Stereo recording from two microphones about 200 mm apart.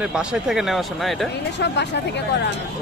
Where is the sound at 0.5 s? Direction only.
Centre (ahead or behind).